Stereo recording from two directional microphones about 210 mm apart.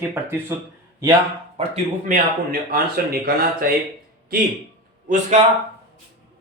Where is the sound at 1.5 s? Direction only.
35° right (ahead or behind).